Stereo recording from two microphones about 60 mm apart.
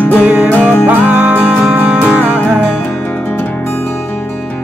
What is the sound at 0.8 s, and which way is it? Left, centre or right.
Music, right.